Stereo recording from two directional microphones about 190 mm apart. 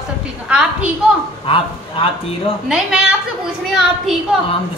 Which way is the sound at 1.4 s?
30° left (ahead or behind).